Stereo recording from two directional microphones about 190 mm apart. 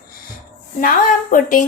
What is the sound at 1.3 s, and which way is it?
Speech, 45° left (ahead or behind).